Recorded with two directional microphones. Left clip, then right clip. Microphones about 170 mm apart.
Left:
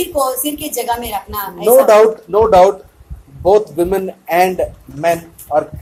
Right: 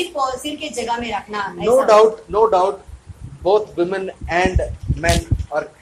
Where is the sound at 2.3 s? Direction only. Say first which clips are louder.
Left 6 dB; 35° left (ahead or behind).